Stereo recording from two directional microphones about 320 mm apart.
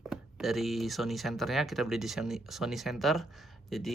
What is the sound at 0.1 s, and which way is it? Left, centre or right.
Speech, centre.